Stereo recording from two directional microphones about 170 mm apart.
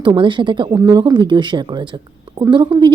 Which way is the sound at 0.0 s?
25° right (ahead or behind).